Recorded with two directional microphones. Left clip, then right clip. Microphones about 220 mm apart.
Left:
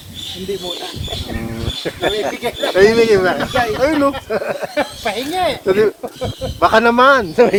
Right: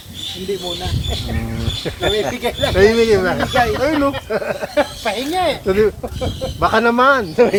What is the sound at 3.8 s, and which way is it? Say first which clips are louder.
Speech: left 2 dB; 40° left (ahead or behind).